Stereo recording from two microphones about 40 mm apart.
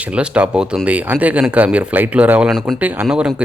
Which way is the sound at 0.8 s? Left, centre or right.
Right.